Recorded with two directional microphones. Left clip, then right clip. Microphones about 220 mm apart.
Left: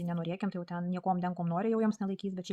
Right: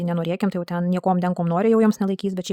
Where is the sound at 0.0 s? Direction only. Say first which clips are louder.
Right 13 dB; 50° right (ahead or behind).